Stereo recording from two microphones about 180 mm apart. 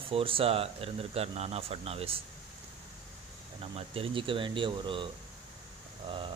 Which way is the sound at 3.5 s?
30° right (ahead or behind).